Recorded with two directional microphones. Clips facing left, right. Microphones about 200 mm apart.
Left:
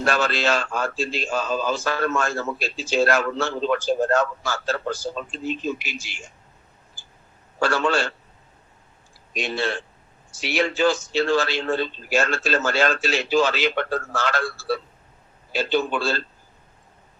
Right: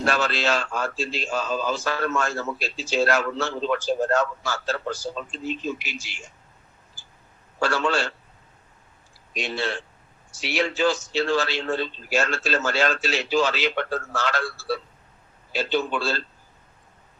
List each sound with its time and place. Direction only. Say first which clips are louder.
0.0 s a man's voice: left 2 dB; 50° left (ahead or behind)
7.6 s a man's voice: left 2 dB; 50° left (ahead or behind)
9.3 s a man's voice: left 2 dB; 50° left (ahead or behind)